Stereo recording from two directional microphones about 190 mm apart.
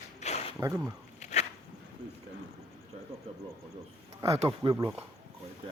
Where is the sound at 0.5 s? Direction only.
15° right (ahead or behind).